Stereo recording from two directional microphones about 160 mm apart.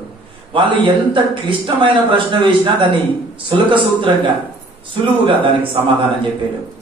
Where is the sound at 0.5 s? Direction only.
30° right (ahead or behind).